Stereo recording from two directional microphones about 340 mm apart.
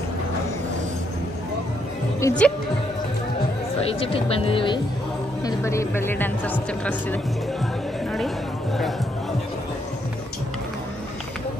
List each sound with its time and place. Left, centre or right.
2.1 s speech: centre
4.0 s speech: centre